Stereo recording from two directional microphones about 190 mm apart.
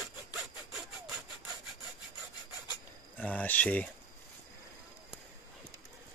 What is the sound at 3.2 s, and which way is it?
Cricket, 10° left (ahead or behind).